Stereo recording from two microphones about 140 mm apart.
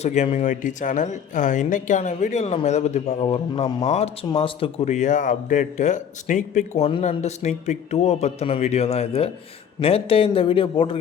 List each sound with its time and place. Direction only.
0.0 s a man's voice: 50° left (ahead or behind)
4.9 s a man's voice: 60° left (ahead or behind); by 11.0 s 40° left (ahead or behind)